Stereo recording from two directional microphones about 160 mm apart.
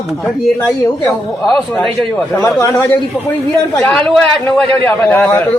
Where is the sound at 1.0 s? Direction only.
5° left (ahead or behind).